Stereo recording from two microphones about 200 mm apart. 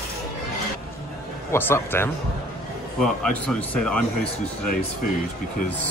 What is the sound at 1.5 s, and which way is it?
Speech, 10° left (ahead or behind).